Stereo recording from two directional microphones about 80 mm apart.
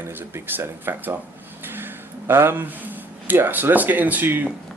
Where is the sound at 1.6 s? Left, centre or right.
Right.